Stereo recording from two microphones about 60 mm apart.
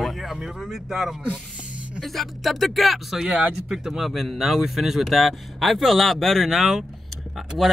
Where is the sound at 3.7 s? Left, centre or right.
Centre.